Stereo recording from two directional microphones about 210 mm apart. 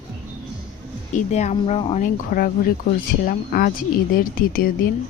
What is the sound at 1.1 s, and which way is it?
Speech, 35° left (ahead or behind).